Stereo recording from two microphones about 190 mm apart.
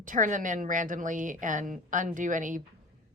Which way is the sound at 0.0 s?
45° right (ahead or behind).